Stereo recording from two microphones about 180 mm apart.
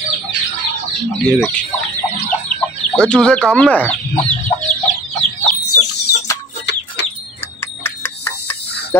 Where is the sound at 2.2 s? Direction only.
5° left (ahead or behind).